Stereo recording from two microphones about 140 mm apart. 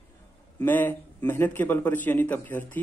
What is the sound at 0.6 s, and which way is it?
A man's voice, 15° left (ahead or behind).